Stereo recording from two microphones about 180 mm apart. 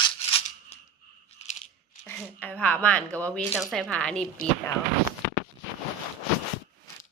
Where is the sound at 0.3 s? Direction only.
30° left (ahead or behind).